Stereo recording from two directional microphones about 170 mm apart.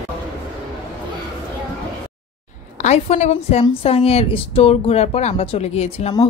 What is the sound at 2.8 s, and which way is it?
A woman's voice, 40° left (ahead or behind).